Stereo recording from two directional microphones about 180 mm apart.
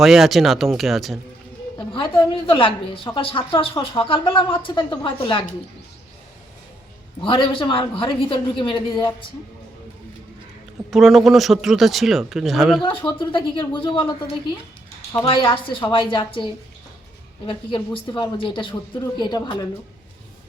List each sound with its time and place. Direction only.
0.0 s speech: centre (ahead or behind)
1.9 s speech: 30° left (ahead or behind)
7.2 s speech: 30° left (ahead or behind)
10.9 s speech: centre (ahead or behind)
12.8 s speech: 30° left (ahead or behind)